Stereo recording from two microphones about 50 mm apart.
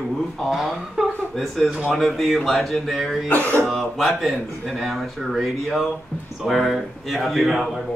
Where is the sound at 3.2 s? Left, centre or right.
Left.